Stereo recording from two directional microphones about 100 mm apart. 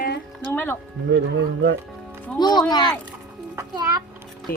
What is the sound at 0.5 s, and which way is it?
Speech, 20° left (ahead or behind).